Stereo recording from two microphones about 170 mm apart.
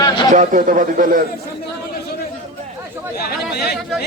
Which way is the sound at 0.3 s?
50° right (ahead or behind).